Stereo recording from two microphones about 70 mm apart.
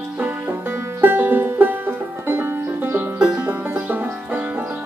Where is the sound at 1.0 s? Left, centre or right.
Right.